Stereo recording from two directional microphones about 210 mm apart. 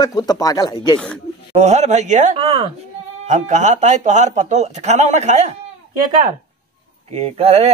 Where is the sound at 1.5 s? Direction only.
30° right (ahead or behind).